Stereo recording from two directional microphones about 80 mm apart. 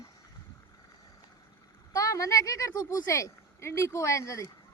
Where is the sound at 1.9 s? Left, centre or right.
Left.